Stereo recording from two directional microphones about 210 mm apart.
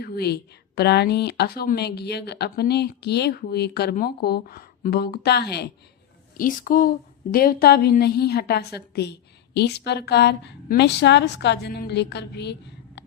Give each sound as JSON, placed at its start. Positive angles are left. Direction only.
{"t": 0.0, "sound": "speech", "side_deg": 50}
{"t": 6.3, "sound": "speech", "side_deg": 40}